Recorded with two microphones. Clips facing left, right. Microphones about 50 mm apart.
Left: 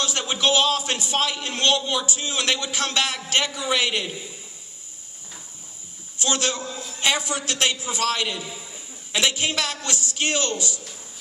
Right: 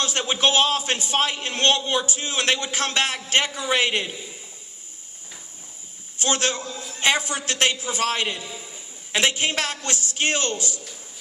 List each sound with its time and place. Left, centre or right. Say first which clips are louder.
0.0 s a man's voice: right 1 dB; right
6.1 s a man's voice: right 1 dB; right